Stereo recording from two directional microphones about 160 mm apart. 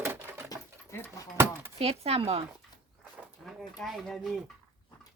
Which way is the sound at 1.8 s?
40° right (ahead or behind).